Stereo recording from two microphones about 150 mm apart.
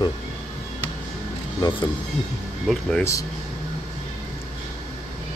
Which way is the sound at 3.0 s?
20° left (ahead or behind).